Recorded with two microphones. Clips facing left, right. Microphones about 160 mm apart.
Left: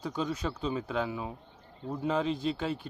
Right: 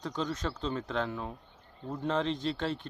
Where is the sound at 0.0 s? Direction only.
10° left (ahead or behind).